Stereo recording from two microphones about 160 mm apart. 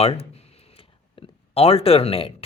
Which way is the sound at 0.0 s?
40° left (ahead or behind).